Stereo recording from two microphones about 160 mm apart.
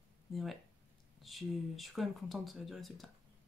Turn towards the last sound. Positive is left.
turn(degrees=0)  # may be behind; listen again after turning